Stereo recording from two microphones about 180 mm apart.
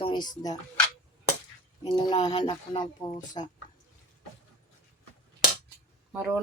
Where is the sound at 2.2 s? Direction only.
25° left (ahead or behind).